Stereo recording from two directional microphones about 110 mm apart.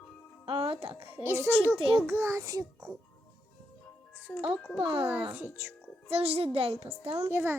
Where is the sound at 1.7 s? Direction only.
50° right (ahead or behind).